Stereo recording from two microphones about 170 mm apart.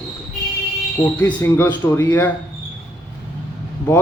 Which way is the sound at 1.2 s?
15° left (ahead or behind).